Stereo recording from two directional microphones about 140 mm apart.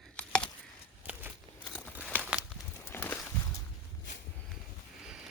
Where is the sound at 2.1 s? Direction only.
10° right (ahead or behind).